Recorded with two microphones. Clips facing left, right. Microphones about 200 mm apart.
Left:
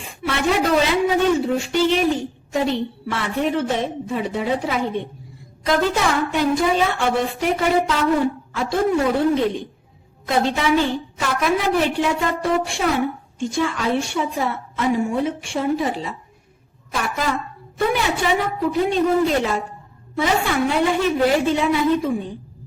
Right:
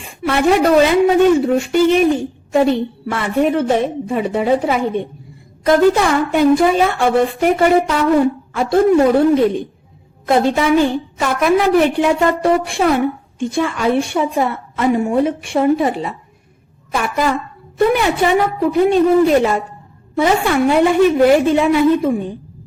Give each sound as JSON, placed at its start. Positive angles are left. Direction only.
{"t": 0.2, "sound": "a woman's voice", "side_deg": -55}